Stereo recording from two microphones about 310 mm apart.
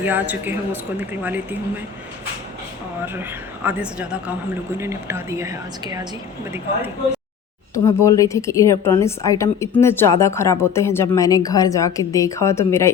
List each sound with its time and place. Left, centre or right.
0.0 s speech: centre
3.2 s a woman's voice: centre
7.7 s a woman's voice: centre